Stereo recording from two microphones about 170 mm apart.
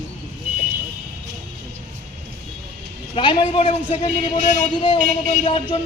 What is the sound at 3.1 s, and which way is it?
Speech, 30° left (ahead or behind).